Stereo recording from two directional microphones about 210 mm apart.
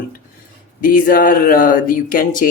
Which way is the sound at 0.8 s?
40° left (ahead or behind).